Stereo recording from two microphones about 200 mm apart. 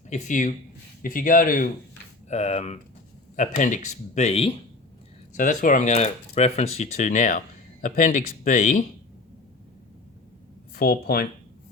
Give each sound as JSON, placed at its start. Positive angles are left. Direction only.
{"t": 0.1, "sound": "speech", "side_deg": 40}
{"t": 10.8, "sound": "speech", "side_deg": 50}